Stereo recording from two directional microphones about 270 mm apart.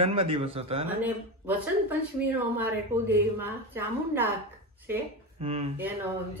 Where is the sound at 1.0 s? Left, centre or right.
Centre.